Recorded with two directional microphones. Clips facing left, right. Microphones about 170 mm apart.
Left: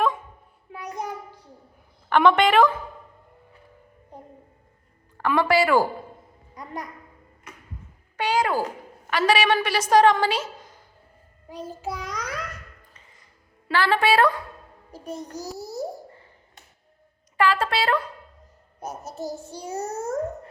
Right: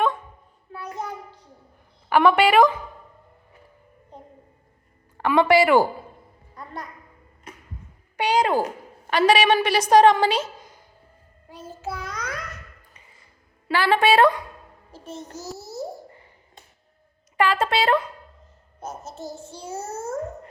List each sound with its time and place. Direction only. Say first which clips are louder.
0.7 s child singing: even; 15° left (ahead or behind)
2.0 s a woman's voice: right 1 dB; 10° right (ahead or behind)
5.1 s a woman's voice: right 3 dB; 20° right (ahead or behind)
6.5 s a sound: left 2 dB; 15° left (ahead or behind)
8.1 s a woman's voice: right 3 dB; 15° right (ahead or behind)
11.4 s child singing: left 2 dB; 15° left (ahead or behind)
13.7 s a woman's voice: right 2 dB; 15° right (ahead or behind)
14.9 s child singing: left 3 dB; 15° left (ahead or behind)
17.3 s a woman's voice: right 1 dB; 20° right (ahead or behind)
18.8 s child singing: left 1 dB; 15° left (ahead or behind)
19.1 s child singing: left 4 dB; 35° left (ahead or behind)
19.4 s child singing: left 2 dB; 15° left (ahead or behind)